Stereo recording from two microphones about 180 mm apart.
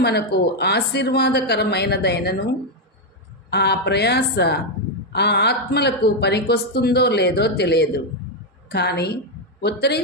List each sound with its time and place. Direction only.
0.0 s a woman's voice: 65° left (ahead or behind)